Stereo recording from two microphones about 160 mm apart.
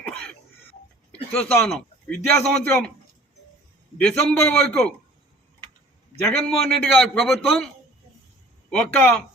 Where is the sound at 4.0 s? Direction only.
5° left (ahead or behind).